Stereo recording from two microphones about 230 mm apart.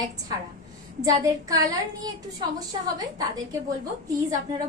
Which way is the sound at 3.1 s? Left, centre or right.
Centre.